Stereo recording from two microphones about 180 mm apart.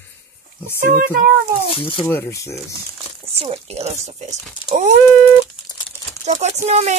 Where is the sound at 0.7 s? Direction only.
50° right (ahead or behind).